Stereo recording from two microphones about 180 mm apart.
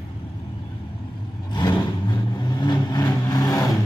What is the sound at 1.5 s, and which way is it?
Vehicle, 25° left (ahead or behind).